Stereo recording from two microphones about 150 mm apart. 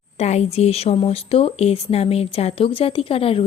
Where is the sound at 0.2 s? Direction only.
45° left (ahead or behind).